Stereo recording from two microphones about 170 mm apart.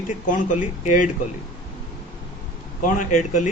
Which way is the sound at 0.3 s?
50° left (ahead or behind).